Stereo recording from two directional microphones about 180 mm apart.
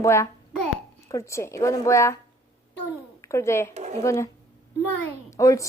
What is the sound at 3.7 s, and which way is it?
Speech, 40° right (ahead or behind).